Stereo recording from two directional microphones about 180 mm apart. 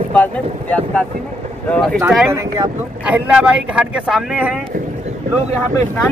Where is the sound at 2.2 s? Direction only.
15° right (ahead or behind).